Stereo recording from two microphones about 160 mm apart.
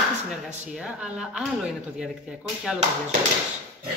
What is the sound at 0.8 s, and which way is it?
Speech, 5° right (ahead or behind).